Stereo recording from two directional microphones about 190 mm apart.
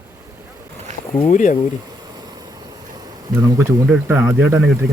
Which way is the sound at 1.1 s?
40° left (ahead or behind).